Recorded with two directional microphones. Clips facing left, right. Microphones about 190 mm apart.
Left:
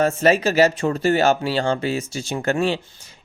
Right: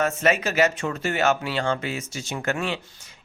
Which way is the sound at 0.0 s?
35° left (ahead or behind).